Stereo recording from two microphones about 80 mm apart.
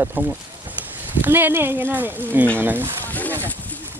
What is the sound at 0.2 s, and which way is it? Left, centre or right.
Speech, right.